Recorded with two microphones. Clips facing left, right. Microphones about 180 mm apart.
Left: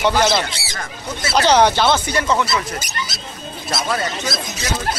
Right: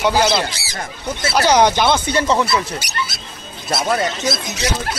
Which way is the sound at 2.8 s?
70° right (ahead or behind).